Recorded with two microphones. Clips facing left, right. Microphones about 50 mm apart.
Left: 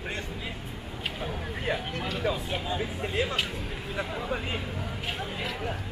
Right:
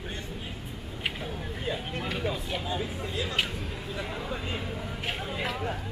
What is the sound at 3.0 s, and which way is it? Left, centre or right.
Speech, left.